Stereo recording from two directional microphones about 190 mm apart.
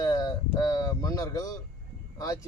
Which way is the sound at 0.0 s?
20° left (ahead or behind).